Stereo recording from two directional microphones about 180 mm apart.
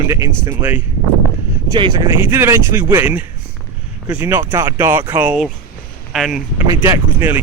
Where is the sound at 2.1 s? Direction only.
15° right (ahead or behind).